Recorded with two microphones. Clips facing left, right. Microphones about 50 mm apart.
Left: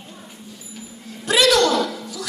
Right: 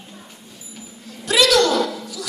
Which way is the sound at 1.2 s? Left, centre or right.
Left.